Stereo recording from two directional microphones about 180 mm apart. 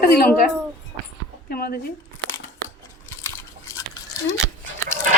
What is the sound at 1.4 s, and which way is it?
Speech, 55° left (ahead or behind).